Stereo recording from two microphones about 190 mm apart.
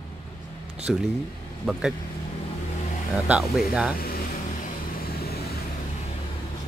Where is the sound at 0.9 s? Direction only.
Centre (ahead or behind).